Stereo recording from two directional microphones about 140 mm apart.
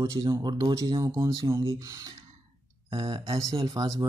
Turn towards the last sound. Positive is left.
turn(degrees=-25)  # may be behind; listen again after turning